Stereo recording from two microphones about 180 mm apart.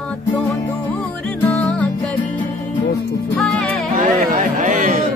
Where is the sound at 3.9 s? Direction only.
45° right (ahead or behind).